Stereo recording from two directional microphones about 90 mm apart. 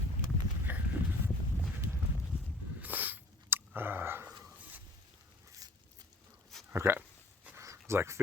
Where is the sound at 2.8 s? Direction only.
20° right (ahead or behind).